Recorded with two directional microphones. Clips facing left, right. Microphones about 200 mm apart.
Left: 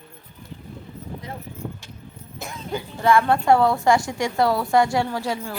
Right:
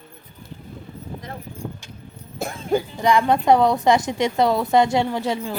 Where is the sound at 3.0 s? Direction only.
15° right (ahead or behind).